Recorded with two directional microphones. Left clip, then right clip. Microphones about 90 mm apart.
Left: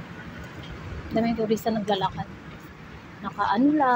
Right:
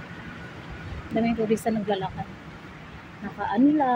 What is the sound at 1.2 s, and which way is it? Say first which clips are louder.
Speech: even; 40° right (ahead or behind).